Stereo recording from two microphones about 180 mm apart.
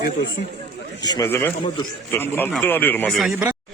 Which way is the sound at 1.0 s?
20° left (ahead or behind).